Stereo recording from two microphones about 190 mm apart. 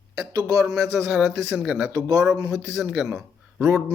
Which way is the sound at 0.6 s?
5° right (ahead or behind).